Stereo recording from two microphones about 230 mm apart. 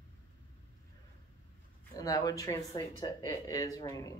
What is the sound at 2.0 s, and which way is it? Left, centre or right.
Speech, centre.